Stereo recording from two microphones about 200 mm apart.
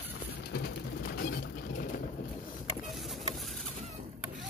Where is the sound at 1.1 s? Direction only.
45° left (ahead or behind).